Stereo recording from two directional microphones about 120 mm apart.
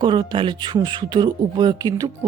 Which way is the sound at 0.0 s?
40° right (ahead or behind).